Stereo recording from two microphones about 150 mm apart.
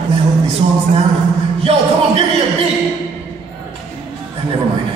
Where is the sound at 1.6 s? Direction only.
40° right (ahead or behind).